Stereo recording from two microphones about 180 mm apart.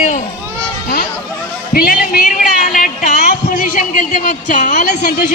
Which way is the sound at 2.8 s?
45° left (ahead or behind).